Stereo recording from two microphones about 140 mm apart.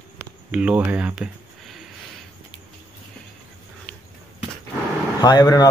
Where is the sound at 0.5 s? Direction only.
10° right (ahead or behind).